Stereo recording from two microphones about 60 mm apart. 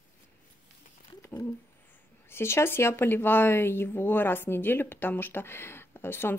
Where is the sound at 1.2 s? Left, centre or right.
Left.